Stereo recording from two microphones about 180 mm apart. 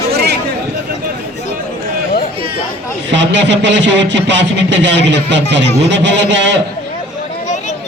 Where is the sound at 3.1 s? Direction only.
80° right.